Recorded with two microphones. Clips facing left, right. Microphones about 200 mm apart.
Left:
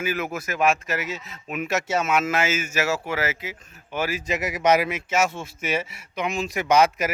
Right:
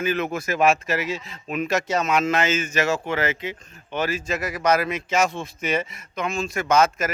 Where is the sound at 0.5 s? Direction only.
30° right (ahead or behind).